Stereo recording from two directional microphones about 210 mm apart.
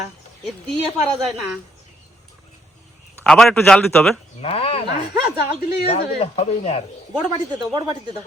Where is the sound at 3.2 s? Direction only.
5° left (ahead or behind).